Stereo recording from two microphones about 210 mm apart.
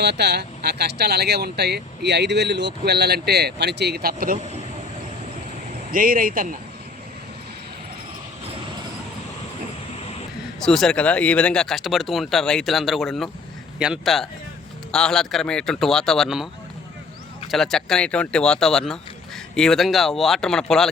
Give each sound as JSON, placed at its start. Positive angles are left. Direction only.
{"t": 0.0, "sound": "speech", "side_deg": -50}
{"t": 5.9, "sound": "speech", "side_deg": -40}
{"t": 10.6, "sound": "speech", "side_deg": 0}
{"t": 17.5, "sound": "speech", "side_deg": 0}